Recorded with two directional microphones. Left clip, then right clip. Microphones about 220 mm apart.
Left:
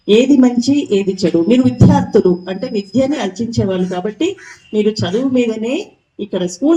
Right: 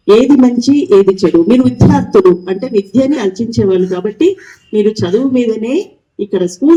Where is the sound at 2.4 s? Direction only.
25° right (ahead or behind).